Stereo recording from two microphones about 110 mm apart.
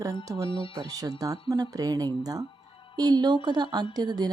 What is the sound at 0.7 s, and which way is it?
A woman's voice, 35° right (ahead or behind).